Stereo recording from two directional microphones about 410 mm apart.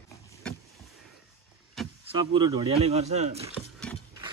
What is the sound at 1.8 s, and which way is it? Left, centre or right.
Vehicle, centre.